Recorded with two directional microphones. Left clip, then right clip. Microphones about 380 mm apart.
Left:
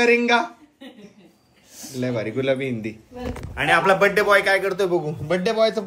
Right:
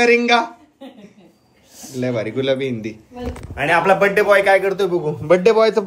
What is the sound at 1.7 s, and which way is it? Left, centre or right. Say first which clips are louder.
A man's voice: right 4 dB; centre.